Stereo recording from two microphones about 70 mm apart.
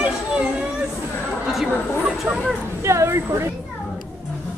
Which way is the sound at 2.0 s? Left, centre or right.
Centre.